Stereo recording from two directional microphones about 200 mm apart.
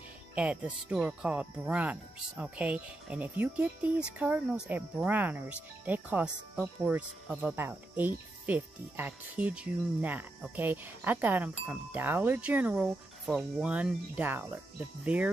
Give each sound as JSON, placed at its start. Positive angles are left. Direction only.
{"t": 0.3, "sound": "speech", "side_deg": -5}